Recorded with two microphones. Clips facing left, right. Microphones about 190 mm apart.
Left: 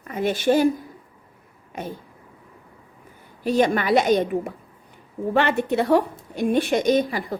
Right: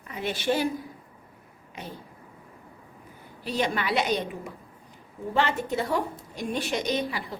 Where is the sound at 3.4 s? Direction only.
50° left (ahead or behind).